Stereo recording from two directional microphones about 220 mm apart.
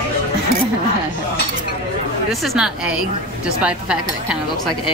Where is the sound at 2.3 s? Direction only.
Centre (ahead or behind).